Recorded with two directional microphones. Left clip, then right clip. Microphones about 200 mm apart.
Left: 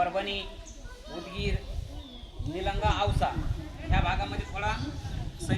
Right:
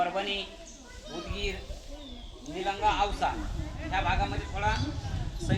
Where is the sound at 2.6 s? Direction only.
20° left (ahead or behind).